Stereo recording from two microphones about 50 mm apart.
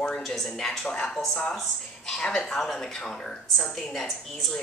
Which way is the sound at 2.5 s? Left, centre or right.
Centre.